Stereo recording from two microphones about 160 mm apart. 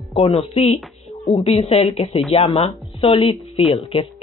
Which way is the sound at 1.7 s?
35° left (ahead or behind).